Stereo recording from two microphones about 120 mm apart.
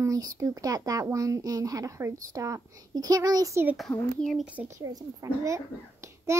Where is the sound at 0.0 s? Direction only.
30° right (ahead or behind).